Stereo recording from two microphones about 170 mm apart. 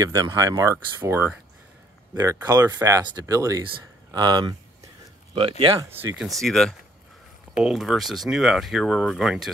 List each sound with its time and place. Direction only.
0.0 s speech: 20° right (ahead or behind)
2.1 s speech: 20° right (ahead or behind)
5.9 s speech: 10° right (ahead or behind)
6.2 s speech: centre (ahead or behind)